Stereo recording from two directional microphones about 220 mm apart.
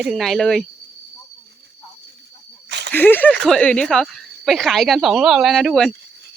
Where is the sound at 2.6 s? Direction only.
50° right (ahead or behind).